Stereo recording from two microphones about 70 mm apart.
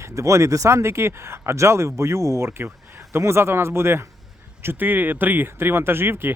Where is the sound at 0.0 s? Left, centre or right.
Right.